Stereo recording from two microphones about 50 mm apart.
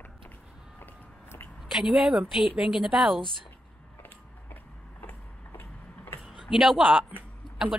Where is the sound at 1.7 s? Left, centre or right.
Centre.